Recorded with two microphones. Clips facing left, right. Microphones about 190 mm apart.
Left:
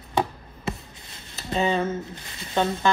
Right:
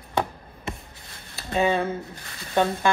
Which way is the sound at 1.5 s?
15° right (ahead or behind).